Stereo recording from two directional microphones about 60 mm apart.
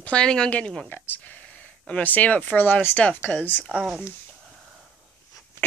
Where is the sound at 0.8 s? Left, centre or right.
Left.